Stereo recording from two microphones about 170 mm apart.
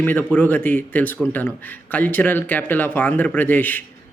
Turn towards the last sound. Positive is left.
turn(degrees=10)  # may be behind; listen again after turning